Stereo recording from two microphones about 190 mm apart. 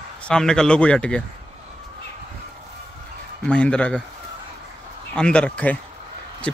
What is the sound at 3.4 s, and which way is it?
Speech, 5° left (ahead or behind).